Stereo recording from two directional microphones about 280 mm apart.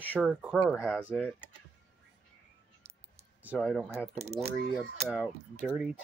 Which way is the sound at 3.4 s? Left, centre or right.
Centre.